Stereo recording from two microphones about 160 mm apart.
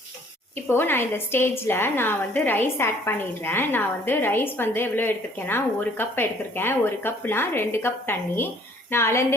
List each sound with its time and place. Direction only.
0.7 s a woman's voice: 15° left (ahead or behind)